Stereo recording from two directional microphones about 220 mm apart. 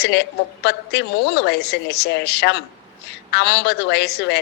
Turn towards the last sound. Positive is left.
turn(degrees=50)  # may be behind; listen again after turning